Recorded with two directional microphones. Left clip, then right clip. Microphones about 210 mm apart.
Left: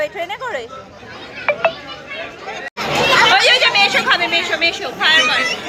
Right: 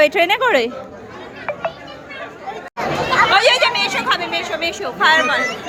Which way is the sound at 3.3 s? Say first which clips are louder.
Left 2 dB; 10° right (ahead or behind).